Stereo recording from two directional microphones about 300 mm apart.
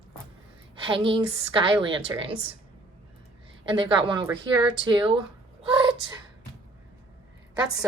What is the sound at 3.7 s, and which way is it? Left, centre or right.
A woman's voice, centre.